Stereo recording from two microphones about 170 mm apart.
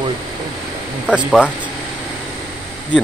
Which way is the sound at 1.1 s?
5° right (ahead or behind).